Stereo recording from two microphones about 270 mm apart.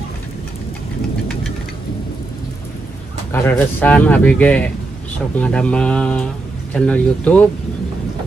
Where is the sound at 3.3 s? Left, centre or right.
Centre.